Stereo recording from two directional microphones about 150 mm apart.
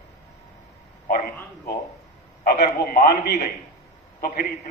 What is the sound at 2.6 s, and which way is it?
Speech, 80° left.